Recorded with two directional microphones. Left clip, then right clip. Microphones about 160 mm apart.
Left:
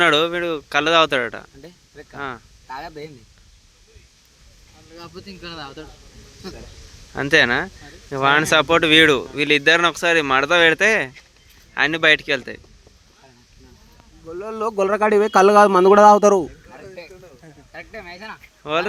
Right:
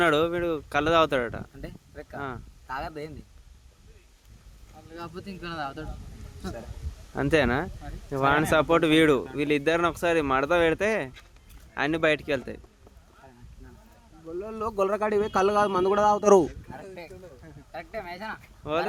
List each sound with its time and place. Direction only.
0.0 s speech: 5° right (ahead or behind)
5.4 s speech: 55° right (ahead or behind)
7.1 s speech: 5° right (ahead or behind)
14.3 s speech: 35° left (ahead or behind); by 16.2 s 60° left (ahead or behind)
16.2 s speech: centre (ahead or behind)
17.7 s speech: 5° right (ahead or behind)
18.6 s speech: centre (ahead or behind)